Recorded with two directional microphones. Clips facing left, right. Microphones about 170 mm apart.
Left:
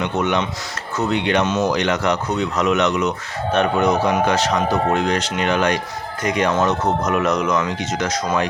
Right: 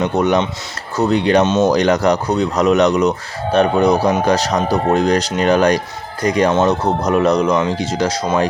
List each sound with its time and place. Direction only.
0.0 s speech: 35° right (ahead or behind)